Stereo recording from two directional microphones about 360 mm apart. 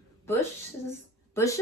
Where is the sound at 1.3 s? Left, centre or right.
Centre.